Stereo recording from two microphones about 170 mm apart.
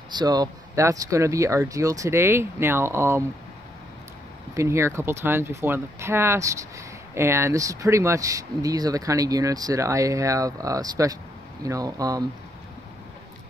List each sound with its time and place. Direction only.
0.1 s speech: 25° right (ahead or behind)
4.6 s speech: 15° right (ahead or behind)